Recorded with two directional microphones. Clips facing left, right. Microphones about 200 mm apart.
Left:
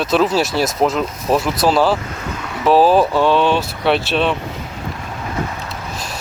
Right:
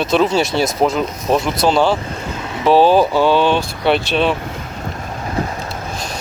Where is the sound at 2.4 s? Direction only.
20° right (ahead or behind).